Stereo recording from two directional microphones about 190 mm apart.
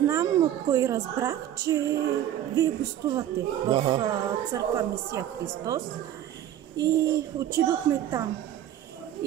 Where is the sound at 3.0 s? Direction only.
15° right (ahead or behind).